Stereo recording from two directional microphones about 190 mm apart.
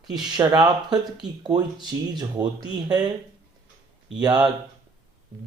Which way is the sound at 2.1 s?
20° right (ahead or behind).